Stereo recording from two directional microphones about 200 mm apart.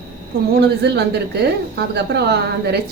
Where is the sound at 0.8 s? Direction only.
55° right (ahead or behind).